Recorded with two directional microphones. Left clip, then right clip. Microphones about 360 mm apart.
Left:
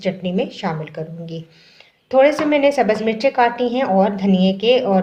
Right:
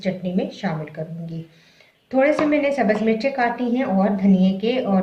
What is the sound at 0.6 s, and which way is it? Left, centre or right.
Speech, left.